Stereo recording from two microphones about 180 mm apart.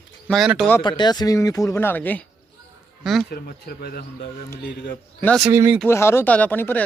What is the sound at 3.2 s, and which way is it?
Speech, 60° left (ahead or behind).